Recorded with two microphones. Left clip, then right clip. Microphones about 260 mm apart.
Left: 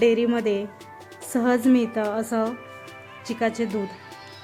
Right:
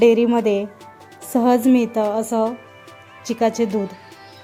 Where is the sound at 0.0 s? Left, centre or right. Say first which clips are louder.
Right 6 dB; centre.